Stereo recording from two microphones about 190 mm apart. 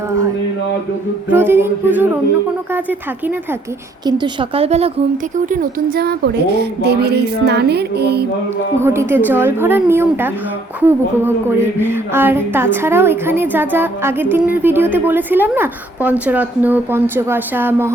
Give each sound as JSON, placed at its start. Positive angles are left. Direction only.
{"t": 1.3, "sound": "a woman's voice", "side_deg": -10}
{"t": 4.0, "sound": "speech", "side_deg": -25}
{"t": 5.5, "sound": "a woman's voice", "side_deg": -45}
{"t": 8.8, "sound": "a woman's voice", "side_deg": -15}